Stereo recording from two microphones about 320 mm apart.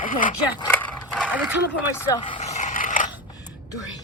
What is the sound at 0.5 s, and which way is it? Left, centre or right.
Dog, centre.